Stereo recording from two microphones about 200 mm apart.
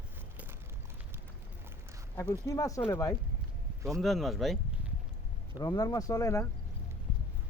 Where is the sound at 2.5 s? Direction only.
15° left (ahead or behind).